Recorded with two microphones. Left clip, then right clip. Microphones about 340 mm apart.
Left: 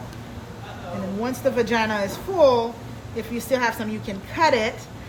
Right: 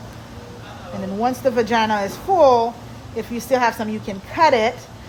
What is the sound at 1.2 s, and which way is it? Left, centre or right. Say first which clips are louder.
A woman's voice: right 4 dB; right.